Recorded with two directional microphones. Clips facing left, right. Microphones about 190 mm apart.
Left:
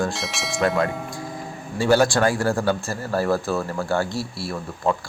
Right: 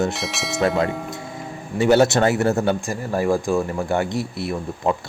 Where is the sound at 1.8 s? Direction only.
20° right (ahead or behind).